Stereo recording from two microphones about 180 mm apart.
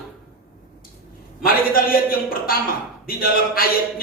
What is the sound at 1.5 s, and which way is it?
Speech, 55° left (ahead or behind).